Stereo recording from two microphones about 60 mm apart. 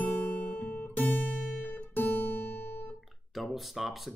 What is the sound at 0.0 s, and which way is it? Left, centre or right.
Guitar, left.